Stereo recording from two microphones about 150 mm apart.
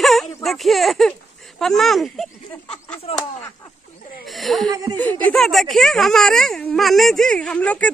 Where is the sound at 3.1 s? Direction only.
45° left (ahead or behind).